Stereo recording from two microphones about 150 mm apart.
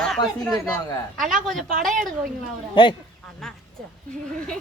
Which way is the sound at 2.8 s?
35° left (ahead or behind).